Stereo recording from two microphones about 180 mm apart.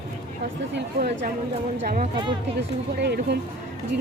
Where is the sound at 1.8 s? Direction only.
50° right (ahead or behind).